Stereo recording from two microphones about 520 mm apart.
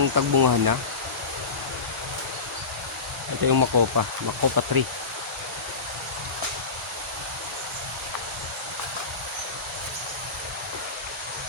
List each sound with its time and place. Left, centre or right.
0.0 s speech: right
3.4 s speech: right